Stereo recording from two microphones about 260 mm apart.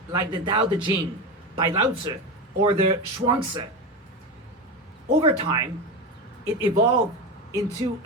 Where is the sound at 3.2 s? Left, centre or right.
Centre.